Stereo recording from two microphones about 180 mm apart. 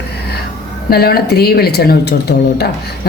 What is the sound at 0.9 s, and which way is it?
A woman's voice, 60° left (ahead or behind).